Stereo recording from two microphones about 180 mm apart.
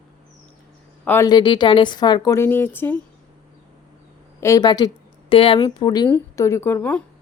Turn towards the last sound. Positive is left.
turn(degrees=10)  # may be behind; listen again after turning